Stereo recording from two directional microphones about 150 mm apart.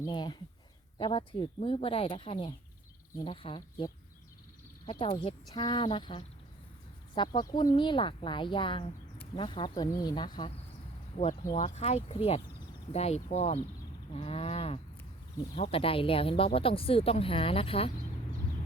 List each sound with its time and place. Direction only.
0.0 s speech: 30° left (ahead or behind)
4.9 s speech: 35° left (ahead or behind)
11.5 s speech: 50° left (ahead or behind)